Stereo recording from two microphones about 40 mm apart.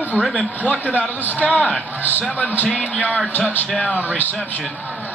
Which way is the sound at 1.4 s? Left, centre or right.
Left.